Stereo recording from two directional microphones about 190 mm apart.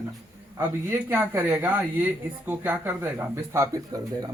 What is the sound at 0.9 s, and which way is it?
Speech, 10° right (ahead or behind).